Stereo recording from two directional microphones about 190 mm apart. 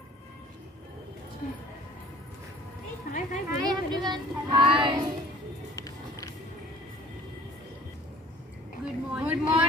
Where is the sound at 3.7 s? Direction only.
20° right (ahead or behind).